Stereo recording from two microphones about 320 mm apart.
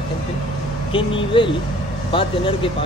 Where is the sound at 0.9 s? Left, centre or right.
Centre.